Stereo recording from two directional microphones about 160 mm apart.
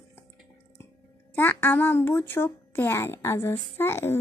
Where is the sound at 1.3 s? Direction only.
15° left (ahead or behind).